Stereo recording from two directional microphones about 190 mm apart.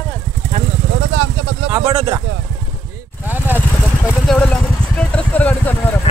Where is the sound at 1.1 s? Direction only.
90° right.